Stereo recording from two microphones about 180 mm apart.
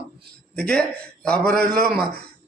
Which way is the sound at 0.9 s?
5° left (ahead or behind).